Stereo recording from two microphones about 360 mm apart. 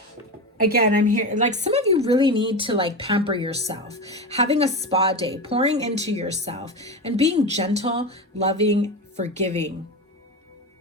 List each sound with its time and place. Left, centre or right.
0.6 s a woman's voice: right
6.7 s a woman's voice: centre
7.0 s a woman's voice: centre